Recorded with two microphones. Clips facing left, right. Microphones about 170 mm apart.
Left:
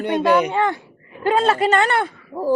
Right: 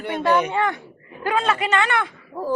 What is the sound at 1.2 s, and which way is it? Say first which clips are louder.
Speech: left 5 dB; 35° left (ahead or behind).